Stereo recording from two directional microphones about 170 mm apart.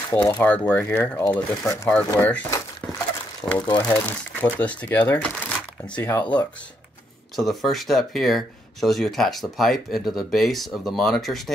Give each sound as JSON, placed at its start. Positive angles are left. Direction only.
{"t": 0.1, "sound": "speech", "side_deg": 10}
{"t": 3.5, "sound": "speech", "side_deg": 25}
{"t": 3.8, "sound": "speech", "side_deg": 10}
{"t": 7.3, "sound": "speech", "side_deg": 0}